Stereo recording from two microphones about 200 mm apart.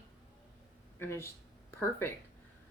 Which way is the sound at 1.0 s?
10° left (ahead or behind).